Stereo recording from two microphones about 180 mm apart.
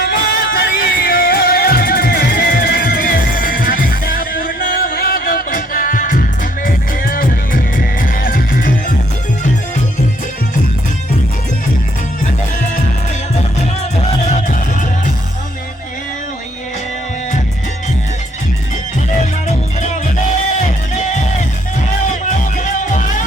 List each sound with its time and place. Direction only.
0.0 s music: 55° left (ahead or behind)
14.3 s music: 45° left (ahead or behind)
19.2 s music: 40° left (ahead or behind)